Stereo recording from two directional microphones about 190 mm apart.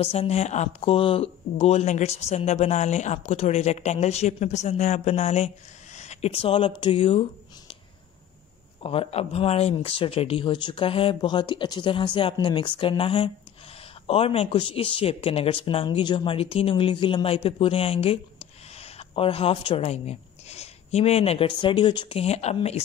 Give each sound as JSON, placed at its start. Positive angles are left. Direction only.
{"t": 0.0, "sound": "speech", "side_deg": 30}
{"t": 5.9, "sound": "a sound", "side_deg": 35}
{"t": 6.8, "sound": "speech", "side_deg": 25}
{"t": 8.8, "sound": "speech", "side_deg": 30}